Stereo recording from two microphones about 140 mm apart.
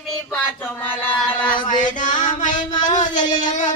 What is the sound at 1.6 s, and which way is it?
Music, 65° left (ahead or behind).